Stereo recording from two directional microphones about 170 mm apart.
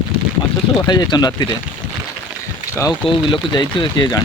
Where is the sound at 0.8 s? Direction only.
25° left (ahead or behind).